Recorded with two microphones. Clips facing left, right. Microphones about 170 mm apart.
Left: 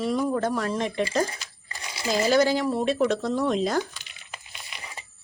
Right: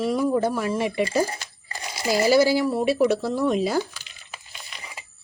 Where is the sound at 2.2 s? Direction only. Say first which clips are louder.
Right 3 dB; 10° right (ahead or behind).